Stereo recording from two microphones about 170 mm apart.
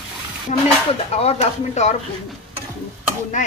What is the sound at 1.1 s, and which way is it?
Speech, 40° left (ahead or behind).